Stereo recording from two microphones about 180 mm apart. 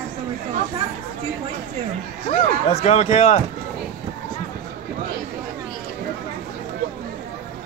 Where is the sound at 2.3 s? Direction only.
35° left (ahead or behind).